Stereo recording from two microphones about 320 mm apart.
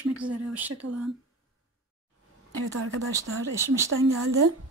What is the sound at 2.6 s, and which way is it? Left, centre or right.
Speech, right.